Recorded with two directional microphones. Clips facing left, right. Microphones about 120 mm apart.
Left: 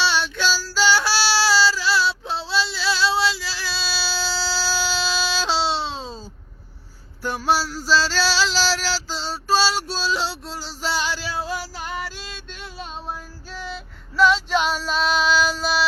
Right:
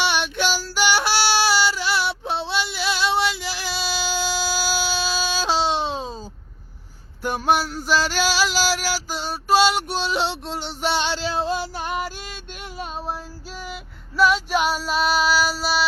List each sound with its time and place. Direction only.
0.0 s female singing: 20° right (ahead or behind)
7.2 s a sound: 20° right (ahead or behind)
13.5 s female singing: 10° right (ahead or behind)